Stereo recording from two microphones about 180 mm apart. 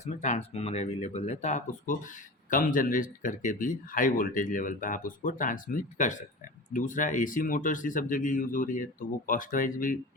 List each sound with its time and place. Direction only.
0.0 s speech: 40° left (ahead or behind)